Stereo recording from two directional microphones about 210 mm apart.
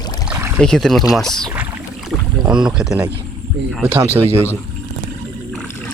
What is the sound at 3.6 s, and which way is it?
Speech, 55° right (ahead or behind).